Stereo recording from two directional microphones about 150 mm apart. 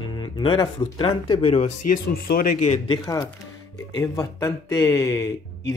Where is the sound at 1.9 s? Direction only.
80° left.